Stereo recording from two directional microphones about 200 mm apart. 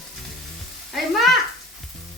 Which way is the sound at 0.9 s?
Centre (ahead or behind).